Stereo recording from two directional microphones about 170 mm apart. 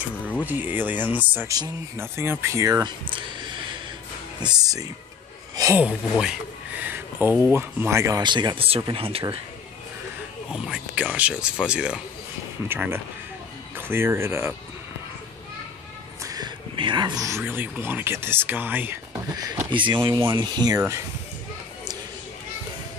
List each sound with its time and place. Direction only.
0.5 s speech: 10° right (ahead or behind)
5.8 s speech: 5° right (ahead or behind); by 9.4 s 30° right (ahead or behind)
10.5 s speech: 5° right (ahead or behind)
16.2 s speech: 20° right (ahead or behind)